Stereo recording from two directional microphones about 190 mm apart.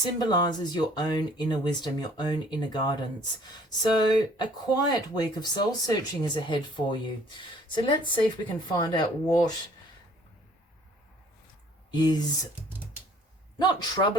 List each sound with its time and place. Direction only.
0.0 s speech: 20° left (ahead or behind)
11.9 s speech: 20° left (ahead or behind)
13.6 s speech: 20° left (ahead or behind)